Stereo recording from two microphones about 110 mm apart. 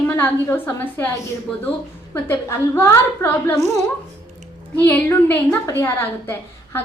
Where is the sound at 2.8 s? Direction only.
25° left (ahead or behind).